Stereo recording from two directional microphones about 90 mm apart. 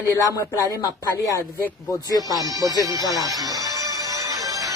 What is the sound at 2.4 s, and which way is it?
Speech, 40° right (ahead or behind).